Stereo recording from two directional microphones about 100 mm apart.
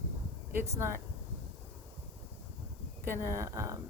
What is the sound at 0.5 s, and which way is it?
Speech, 25° right (ahead or behind).